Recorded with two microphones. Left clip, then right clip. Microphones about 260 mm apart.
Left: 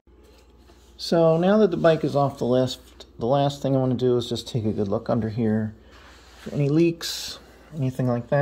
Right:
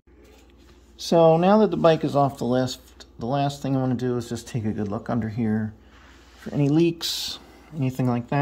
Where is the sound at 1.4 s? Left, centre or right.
Right.